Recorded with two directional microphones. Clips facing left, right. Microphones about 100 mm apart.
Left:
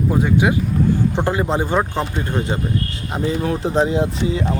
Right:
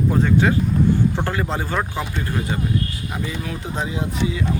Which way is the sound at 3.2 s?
35° left (ahead or behind).